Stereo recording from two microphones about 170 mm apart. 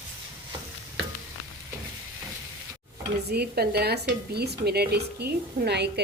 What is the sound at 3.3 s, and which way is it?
Speech, 70° right (ahead or behind).